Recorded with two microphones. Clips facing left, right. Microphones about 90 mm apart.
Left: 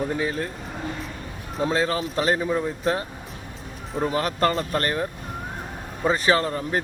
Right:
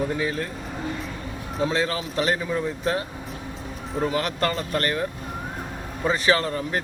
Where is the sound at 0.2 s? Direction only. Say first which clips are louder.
Even; 30° left (ahead or behind).